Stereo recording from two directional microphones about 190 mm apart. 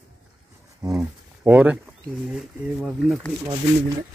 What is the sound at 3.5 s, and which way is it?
Speech, 20° right (ahead or behind).